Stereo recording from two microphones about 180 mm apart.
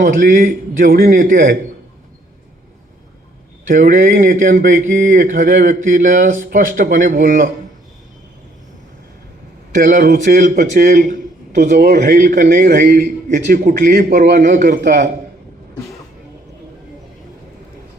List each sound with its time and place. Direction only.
0.0 s a man's voice: 50° right (ahead or behind)
3.7 s a man's voice: 50° right (ahead or behind)
9.7 s a man's voice: 45° right (ahead or behind)
11.9 s a man's voice: 60° right (ahead or behind)
13.3 s a man's voice: 50° right (ahead or behind)